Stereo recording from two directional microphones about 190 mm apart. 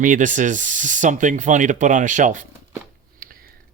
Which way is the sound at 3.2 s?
50° right (ahead or behind).